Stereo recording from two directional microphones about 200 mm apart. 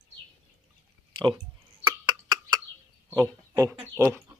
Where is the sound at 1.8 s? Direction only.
20° right (ahead or behind).